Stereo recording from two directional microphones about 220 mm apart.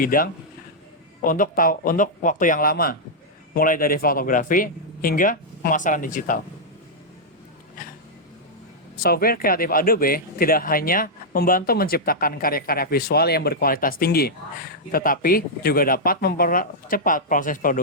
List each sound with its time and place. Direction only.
0.0 s speech: 40° left (ahead or behind)
9.0 s speech: 45° left (ahead or behind)